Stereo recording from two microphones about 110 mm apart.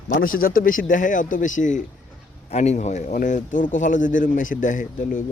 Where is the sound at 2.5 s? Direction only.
85° left.